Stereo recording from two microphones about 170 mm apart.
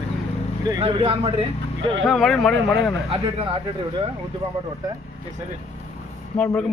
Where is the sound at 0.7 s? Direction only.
30° right (ahead or behind).